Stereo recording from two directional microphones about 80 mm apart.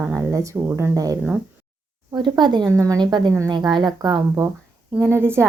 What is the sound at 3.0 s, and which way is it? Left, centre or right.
Speech, right.